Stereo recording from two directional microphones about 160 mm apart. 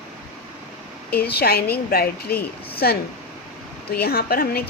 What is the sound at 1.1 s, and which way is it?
A woman's voice, 85° left.